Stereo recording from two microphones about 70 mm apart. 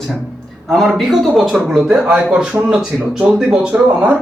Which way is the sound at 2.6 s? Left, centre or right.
Centre.